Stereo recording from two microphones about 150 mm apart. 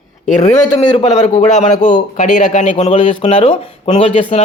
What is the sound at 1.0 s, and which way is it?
A man's voice, 50° left (ahead or behind).